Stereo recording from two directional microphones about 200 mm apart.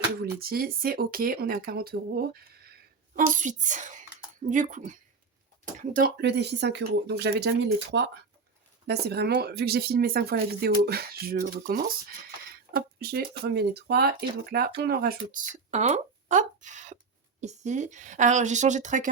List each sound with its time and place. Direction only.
0.2 s speech: 50° right (ahead or behind)
3.2 s a woman's voice: 40° right (ahead or behind)